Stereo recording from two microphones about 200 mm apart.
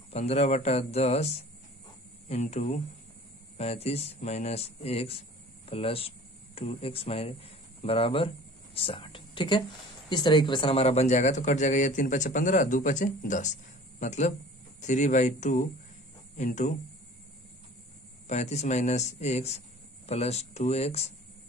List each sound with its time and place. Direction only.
0.1 s speech: 30° left (ahead or behind)
18.2 s speech: 35° left (ahead or behind)